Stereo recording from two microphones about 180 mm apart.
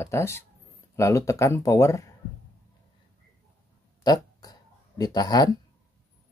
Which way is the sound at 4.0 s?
20° left (ahead or behind).